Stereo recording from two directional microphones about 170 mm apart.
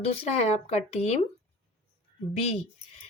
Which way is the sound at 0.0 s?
40° left (ahead or behind).